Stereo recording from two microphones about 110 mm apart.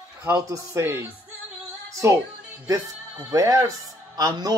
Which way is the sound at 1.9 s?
30° right (ahead or behind).